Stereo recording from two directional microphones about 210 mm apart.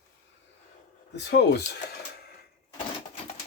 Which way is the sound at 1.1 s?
55° left (ahead or behind).